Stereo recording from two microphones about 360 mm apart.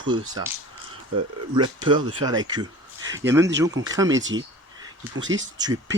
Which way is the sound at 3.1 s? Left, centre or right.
Centre.